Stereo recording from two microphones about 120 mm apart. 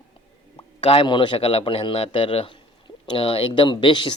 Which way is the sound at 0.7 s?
50° left (ahead or behind).